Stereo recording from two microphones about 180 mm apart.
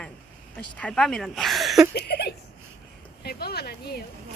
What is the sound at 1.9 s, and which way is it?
Speech, 60° left (ahead or behind).